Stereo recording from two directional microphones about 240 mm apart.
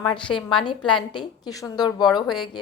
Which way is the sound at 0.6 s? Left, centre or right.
Centre.